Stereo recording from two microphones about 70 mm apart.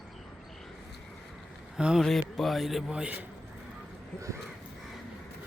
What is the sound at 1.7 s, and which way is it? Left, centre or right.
Speech, centre.